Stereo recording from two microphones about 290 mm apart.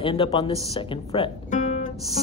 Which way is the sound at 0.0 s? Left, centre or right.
Centre.